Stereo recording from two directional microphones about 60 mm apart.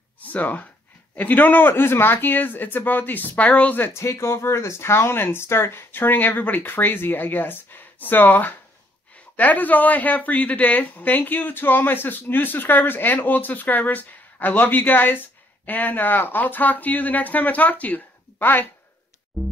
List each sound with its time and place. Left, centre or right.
0.2 s a woman's voice: left
3.9 s a woman's voice: left
19.4 s music: centre